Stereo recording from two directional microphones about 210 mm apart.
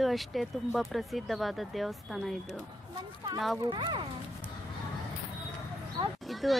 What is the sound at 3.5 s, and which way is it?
Speech, 20° right (ahead or behind).